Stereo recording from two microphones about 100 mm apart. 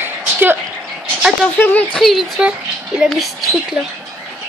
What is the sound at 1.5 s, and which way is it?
Speech, 15° left (ahead or behind).